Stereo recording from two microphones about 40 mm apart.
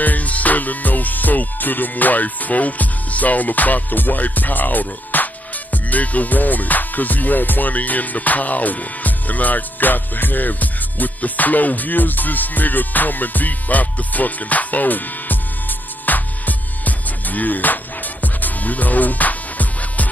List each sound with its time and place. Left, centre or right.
0.0 s music: left